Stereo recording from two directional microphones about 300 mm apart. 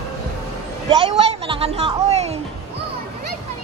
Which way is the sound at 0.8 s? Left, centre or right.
Centre.